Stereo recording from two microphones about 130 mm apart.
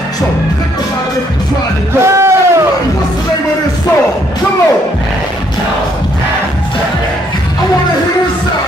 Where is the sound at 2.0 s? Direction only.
20° right (ahead or behind).